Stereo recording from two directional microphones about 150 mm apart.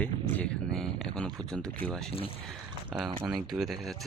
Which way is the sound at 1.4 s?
5° left (ahead or behind).